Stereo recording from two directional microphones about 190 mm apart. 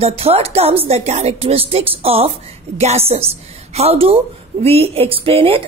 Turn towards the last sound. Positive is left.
turn(degrees=-30)  # may be behind; listen again after turning